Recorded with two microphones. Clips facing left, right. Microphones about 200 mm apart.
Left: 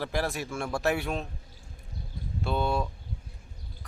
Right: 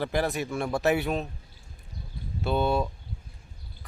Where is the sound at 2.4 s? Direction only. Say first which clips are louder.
Right 3 dB; centre (ahead or behind).